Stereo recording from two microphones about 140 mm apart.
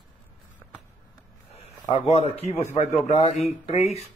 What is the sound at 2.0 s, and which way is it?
A man's voice, 55° left (ahead or behind).